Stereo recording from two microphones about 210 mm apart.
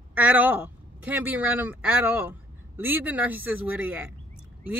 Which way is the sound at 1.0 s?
10° right (ahead or behind).